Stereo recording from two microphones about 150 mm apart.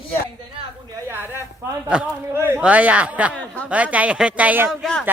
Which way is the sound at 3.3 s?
10° left (ahead or behind).